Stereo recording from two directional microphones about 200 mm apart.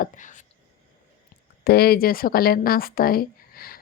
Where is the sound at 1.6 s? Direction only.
50° left (ahead or behind).